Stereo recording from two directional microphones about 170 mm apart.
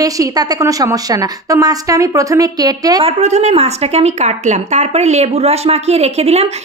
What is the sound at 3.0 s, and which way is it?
A woman's voice, 40° right (ahead or behind).